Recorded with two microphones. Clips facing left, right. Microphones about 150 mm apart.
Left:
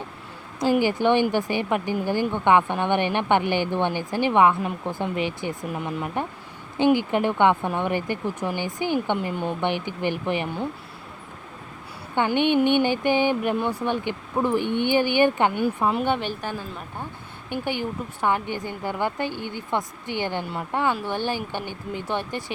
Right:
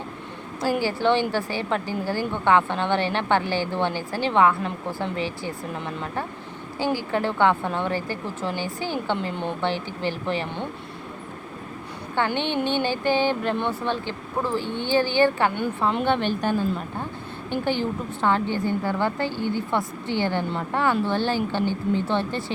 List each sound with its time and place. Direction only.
0.8 s a woman's voice: 15° left (ahead or behind)
12.1 s a woman's voice: 15° left (ahead or behind)
15.6 s a woman's voice: 5° left (ahead or behind)